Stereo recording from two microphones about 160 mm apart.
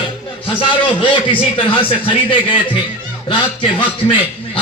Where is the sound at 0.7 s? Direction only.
10° left (ahead or behind).